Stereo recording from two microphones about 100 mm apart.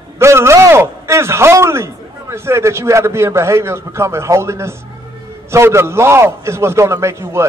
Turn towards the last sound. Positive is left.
turn(degrees=-25)  # may be behind; listen again after turning